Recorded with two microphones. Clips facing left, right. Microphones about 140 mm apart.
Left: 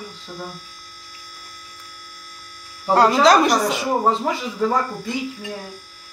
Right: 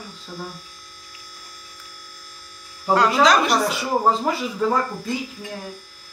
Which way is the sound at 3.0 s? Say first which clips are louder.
Left 4 dB; 35° left (ahead or behind).